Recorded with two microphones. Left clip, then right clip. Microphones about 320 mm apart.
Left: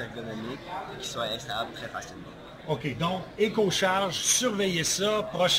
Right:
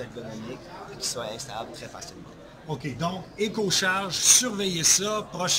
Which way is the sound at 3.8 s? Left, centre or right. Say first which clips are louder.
Even; centre.